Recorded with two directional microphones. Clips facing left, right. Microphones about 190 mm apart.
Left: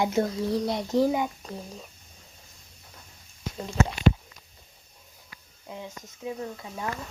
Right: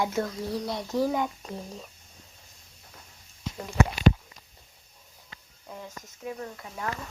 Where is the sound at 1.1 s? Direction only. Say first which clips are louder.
Left 1 dB; 5° left (ahead or behind).